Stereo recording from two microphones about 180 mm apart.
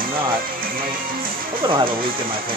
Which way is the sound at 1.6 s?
30° right (ahead or behind).